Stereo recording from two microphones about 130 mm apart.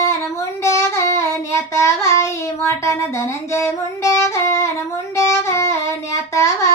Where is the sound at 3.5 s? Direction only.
20° left (ahead or behind).